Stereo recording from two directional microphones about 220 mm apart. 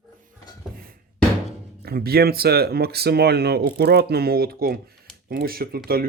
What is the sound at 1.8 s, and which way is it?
Speech, 45° right (ahead or behind).